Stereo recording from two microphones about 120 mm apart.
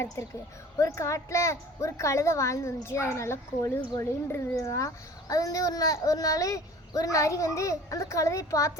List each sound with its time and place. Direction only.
0.8 s a child's voice: 25° left (ahead or behind)